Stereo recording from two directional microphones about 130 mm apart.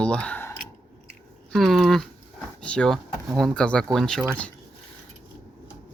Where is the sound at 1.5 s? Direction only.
Centre (ahead or behind).